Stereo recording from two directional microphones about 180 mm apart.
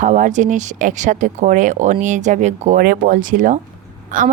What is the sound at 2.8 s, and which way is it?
A woman's voice, 50° right (ahead or behind).